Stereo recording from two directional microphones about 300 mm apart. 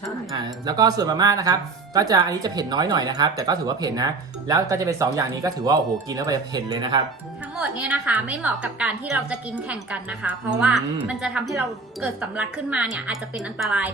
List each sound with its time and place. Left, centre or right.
0.3 s a woman's voice: centre